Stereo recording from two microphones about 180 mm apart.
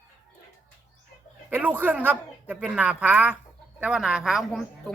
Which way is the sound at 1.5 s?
10° right (ahead or behind).